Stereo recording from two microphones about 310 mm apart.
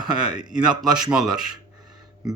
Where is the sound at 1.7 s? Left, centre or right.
Centre.